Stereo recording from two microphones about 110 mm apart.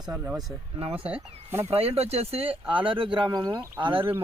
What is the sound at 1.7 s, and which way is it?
Speech, 65° right (ahead or behind).